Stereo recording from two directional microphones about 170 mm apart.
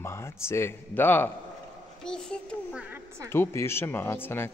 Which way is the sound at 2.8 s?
10° right (ahead or behind).